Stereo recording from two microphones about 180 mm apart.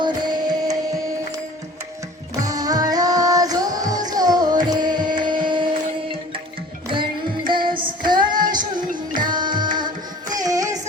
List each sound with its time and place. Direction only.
0.0 s music: 25° right (ahead or behind)
2.4 s music: 20° right (ahead or behind)
6.9 s child singing: 25° right (ahead or behind)
9.3 s music: 25° right (ahead or behind)